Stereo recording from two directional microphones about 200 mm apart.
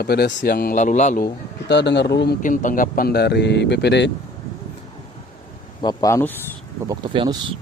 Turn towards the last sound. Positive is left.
turn(degrees=-25)  # may be behind; listen again after turning